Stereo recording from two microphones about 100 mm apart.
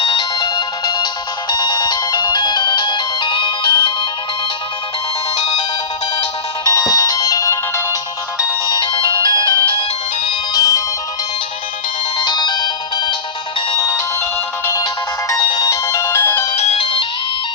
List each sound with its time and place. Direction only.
0.0 s music: 55° left (ahead or behind)
0.3 s music: 40° left (ahead or behind)
5.4 s music: 90° left
6.7 s ringtone: 35° left (ahead or behind)
8.7 s music: 50° left (ahead or behind); by 10.8 s 35° left (ahead or behind)
12.2 s ringtone: 50° left (ahead or behind)
15.4 s music: 40° left (ahead or behind); by 16.5 s 20° left (ahead or behind)
16.6 s music: 80° left; by 17.1 s 60° left (ahead or behind)